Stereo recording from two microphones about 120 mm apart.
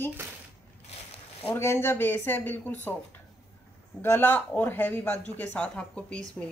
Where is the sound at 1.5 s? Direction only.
20° left (ahead or behind).